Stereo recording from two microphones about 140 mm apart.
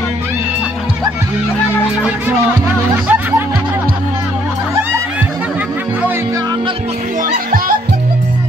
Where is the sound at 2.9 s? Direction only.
15° right (ahead or behind).